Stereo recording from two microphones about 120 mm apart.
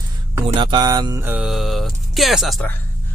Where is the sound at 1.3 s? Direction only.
5° right (ahead or behind).